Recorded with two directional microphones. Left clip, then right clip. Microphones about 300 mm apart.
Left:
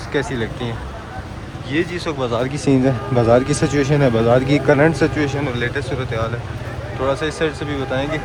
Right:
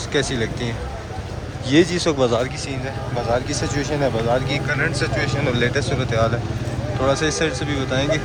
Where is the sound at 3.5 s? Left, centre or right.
Left.